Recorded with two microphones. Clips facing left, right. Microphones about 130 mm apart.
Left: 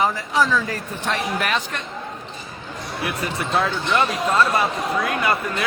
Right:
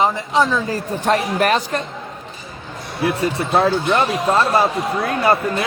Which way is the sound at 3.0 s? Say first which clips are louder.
Right 7 dB; 30° right (ahead or behind).